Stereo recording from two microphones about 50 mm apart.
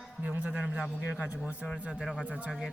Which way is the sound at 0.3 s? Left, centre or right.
Right.